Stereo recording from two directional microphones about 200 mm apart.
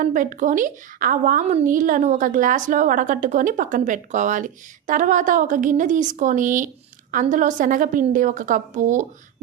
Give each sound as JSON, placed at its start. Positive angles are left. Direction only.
{"t": 0.0, "sound": "a woman's voice", "side_deg": -40}